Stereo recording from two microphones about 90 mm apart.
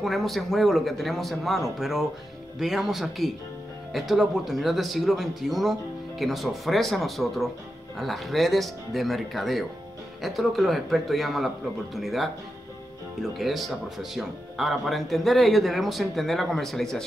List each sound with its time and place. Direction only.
0.0 s speech: centre (ahead or behind)